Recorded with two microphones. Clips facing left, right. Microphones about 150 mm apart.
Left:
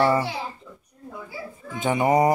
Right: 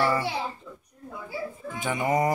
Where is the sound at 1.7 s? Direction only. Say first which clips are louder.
Left 6 dB; 25° left (ahead or behind).